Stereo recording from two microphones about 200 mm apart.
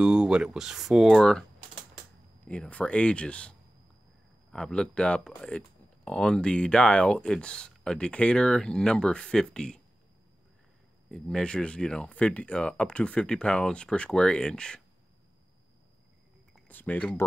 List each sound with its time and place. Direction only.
0.0 s speech: 5° right (ahead or behind)
2.4 s speech: 5° left (ahead or behind)
11.1 s speech: 5° left (ahead or behind)
16.5 s speech: 10° left (ahead or behind)